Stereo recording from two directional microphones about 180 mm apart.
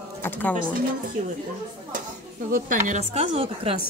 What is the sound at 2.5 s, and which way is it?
A woman's voice, 45° right (ahead or behind).